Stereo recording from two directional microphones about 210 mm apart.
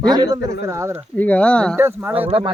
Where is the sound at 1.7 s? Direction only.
10° right (ahead or behind).